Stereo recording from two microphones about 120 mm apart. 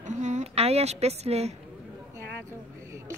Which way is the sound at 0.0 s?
85° right.